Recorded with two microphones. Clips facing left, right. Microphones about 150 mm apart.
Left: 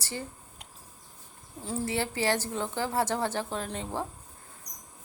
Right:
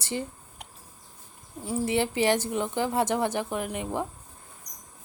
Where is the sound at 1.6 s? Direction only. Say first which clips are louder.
Right 5 dB; 15° right (ahead or behind).